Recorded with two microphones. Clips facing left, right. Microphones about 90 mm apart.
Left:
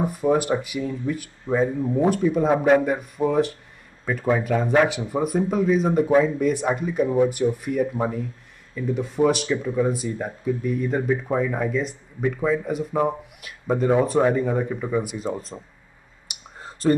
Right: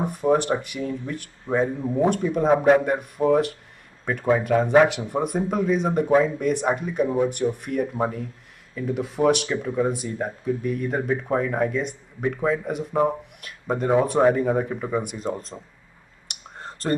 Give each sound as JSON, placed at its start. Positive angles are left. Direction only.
{"t": 0.0, "sound": "speech", "side_deg": 0}
{"t": 16.3, "sound": "clicking", "side_deg": 5}